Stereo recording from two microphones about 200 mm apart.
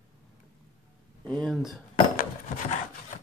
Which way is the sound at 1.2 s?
5° left (ahead or behind).